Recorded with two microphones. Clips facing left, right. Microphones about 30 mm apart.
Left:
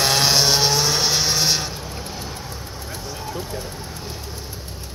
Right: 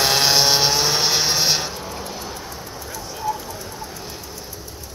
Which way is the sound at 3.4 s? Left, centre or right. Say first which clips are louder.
Left 3 dB; left.